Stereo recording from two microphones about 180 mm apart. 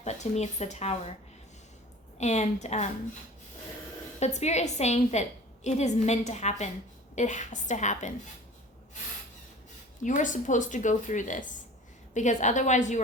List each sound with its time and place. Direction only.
0.0 s a woman's voice: 40° left (ahead or behind)
2.1 s a woman's voice: 40° left (ahead or behind)
4.2 s a woman's voice: 40° left (ahead or behind)
10.0 s a woman's voice: 45° left (ahead or behind)